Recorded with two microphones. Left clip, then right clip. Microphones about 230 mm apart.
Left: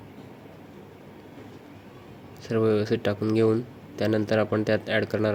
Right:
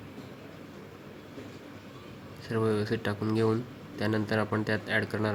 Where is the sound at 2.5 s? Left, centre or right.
Centre.